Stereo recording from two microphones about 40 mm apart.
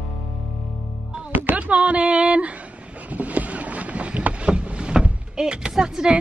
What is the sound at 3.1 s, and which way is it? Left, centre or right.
Boat, right.